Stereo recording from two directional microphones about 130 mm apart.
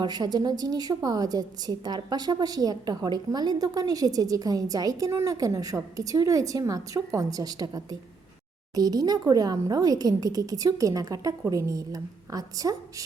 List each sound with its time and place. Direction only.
0.0 s a woman's voice: 35° right (ahead or behind)